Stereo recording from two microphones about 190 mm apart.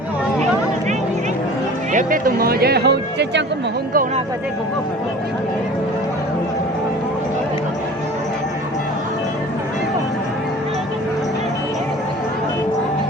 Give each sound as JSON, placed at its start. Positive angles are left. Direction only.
{"t": 1.9, "sound": "speech", "side_deg": -45}